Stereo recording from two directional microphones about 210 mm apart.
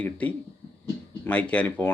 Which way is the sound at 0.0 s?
5° left (ahead or behind).